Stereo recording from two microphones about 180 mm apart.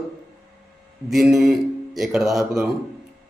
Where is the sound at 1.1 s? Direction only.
Centre (ahead or behind).